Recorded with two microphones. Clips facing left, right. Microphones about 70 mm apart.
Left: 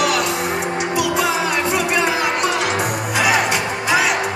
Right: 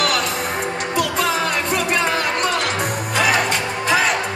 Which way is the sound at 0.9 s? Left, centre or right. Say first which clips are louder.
Even; centre.